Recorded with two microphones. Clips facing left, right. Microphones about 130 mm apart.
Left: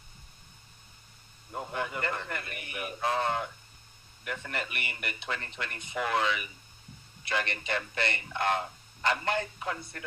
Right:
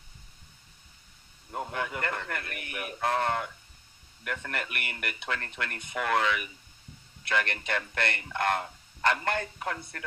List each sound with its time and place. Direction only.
1.5 s speech: 60° right (ahead or behind)